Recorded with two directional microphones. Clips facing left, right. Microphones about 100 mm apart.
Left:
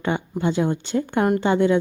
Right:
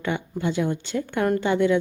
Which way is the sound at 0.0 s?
30° left (ahead or behind).